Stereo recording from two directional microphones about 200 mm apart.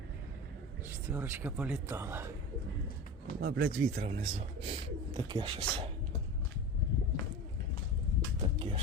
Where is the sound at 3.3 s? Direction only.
50° right (ahead or behind).